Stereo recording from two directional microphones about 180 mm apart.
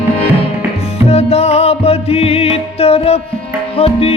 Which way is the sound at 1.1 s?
35° left (ahead or behind).